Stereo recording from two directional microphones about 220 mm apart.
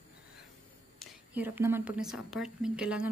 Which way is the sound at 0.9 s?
5° right (ahead or behind).